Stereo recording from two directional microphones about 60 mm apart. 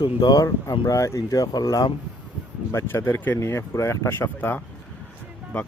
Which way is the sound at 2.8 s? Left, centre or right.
Left.